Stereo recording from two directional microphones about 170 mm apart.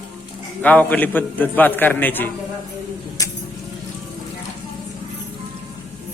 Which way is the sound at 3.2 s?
20° left (ahead or behind).